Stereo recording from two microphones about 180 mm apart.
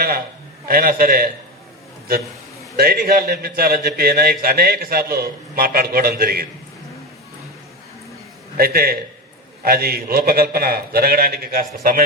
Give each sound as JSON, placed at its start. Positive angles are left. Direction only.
{"t": 0.7, "sound": "a man's voice", "side_deg": -55}
{"t": 2.7, "sound": "a man's voice", "side_deg": -55}
{"t": 8.5, "sound": "a man's voice", "side_deg": -55}